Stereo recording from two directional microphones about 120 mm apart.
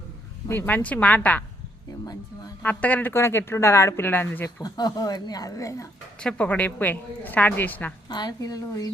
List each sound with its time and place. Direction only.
0.4 s a woman's voice: 15° left (ahead or behind)
2.6 s speech: 15° left (ahead or behind)
4.6 s speech: 35° left (ahead or behind)
6.1 s a woman's voice: 10° left (ahead or behind)
8.1 s speech: 35° left (ahead or behind)